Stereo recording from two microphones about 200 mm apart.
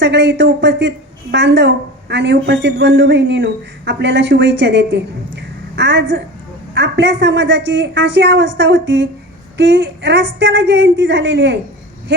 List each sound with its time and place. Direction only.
0.0 s a woman's voice: 60° right (ahead or behind)